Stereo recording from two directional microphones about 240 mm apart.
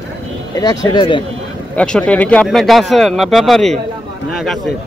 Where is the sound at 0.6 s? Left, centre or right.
Centre.